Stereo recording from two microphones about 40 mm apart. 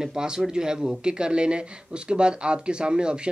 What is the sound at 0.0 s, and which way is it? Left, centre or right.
Speech, centre.